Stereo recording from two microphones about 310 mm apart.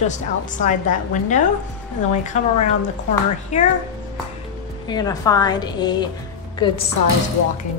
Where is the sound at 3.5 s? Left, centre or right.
Left.